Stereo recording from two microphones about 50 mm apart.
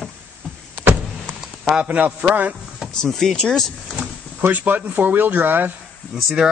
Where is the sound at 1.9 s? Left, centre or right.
Right.